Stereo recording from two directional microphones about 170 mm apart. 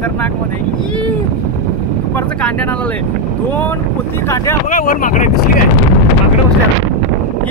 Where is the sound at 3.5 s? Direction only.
10° left (ahead or behind).